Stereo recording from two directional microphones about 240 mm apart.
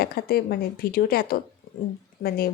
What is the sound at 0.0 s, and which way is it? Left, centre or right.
Speech, left.